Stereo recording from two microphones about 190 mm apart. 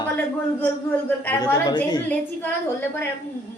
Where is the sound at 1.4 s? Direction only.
20° left (ahead or behind).